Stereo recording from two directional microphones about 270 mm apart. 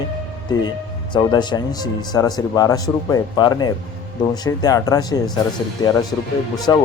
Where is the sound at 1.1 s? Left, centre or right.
Centre.